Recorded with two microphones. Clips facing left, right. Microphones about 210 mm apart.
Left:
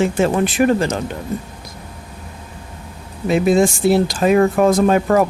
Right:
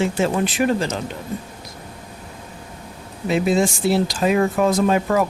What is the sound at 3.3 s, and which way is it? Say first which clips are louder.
Speech: left 4 dB; 50° left (ahead or behind).